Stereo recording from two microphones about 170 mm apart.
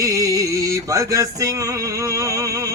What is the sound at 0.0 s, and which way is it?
Music, 20° right (ahead or behind).